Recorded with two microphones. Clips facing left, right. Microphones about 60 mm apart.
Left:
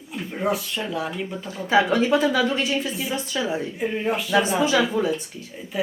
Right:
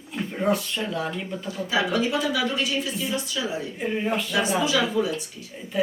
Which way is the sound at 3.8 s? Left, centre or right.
Centre.